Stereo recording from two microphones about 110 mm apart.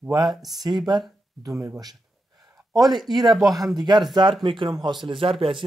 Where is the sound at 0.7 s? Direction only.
40° right (ahead or behind).